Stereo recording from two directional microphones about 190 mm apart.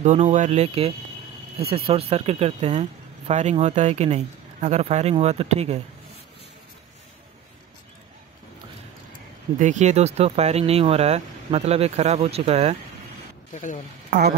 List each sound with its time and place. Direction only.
0.0 s speech: 40° right (ahead or behind)
9.6 s speech: 40° right (ahead or behind)
13.5 s speech: 40° left (ahead or behind)
14.1 s speech: 60° right (ahead or behind)